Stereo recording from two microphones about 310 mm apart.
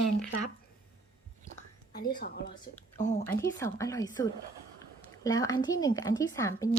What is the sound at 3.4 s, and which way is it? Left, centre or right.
A woman's voice, centre.